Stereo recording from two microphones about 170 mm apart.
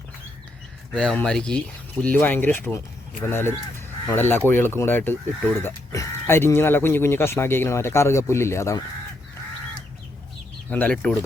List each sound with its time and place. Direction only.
0.9 s speech: 5° left (ahead or behind)
10.7 s speech: 10° left (ahead or behind)